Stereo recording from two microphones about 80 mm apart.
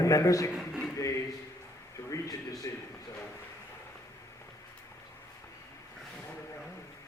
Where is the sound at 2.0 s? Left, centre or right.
Left.